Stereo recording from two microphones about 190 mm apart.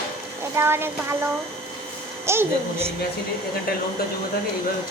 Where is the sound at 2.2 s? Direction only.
15° right (ahead or behind).